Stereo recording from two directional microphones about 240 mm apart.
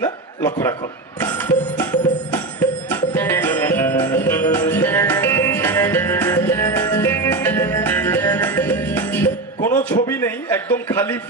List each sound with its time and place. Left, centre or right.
0.4 s a man's voice: centre
1.2 s music: centre
10.0 s a man's voice: centre